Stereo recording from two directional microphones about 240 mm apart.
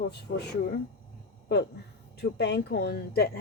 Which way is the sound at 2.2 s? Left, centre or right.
Left.